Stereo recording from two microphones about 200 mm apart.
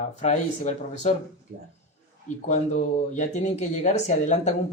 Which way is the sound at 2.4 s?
35° left (ahead or behind).